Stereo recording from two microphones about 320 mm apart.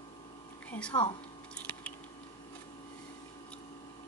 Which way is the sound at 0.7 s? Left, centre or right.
Centre.